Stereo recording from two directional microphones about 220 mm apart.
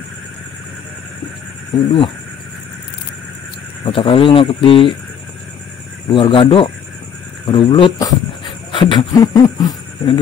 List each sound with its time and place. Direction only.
1.9 s speech: 25° left (ahead or behind)
3.8 s speech: 25° left (ahead or behind)
6.0 s speech: 25° left (ahead or behind)